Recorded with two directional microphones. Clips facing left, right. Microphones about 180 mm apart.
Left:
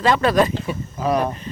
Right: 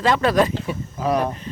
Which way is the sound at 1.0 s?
15° left (ahead or behind).